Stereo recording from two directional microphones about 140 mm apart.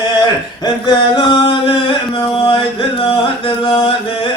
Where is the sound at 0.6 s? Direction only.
35° left (ahead or behind).